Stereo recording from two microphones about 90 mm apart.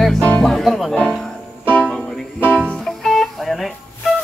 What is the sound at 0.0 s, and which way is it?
Music, 5° left (ahead or behind).